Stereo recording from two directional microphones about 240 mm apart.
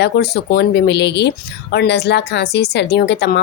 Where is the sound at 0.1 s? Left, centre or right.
Left.